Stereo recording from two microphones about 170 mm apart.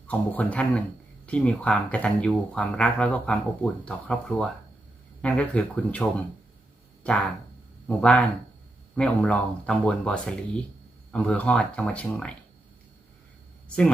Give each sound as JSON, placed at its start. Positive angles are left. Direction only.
{"t": 0.1, "sound": "speech", "side_deg": 10}